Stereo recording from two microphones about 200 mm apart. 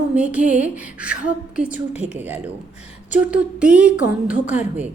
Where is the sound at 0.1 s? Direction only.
5° right (ahead or behind).